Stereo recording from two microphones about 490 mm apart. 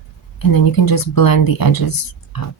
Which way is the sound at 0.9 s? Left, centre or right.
Left.